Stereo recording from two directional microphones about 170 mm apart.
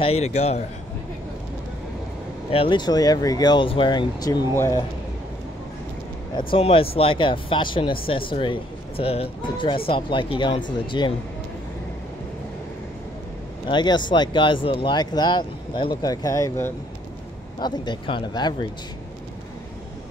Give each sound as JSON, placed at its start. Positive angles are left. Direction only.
{"t": 0.0, "sound": "speech", "side_deg": 40}
{"t": 2.5, "sound": "speech", "side_deg": 30}
{"t": 6.3, "sound": "speech", "side_deg": 30}
{"t": 13.7, "sound": "speech", "side_deg": 25}